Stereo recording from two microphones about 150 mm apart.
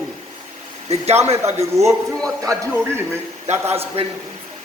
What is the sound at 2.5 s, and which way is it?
Speech, 20° right (ahead or behind).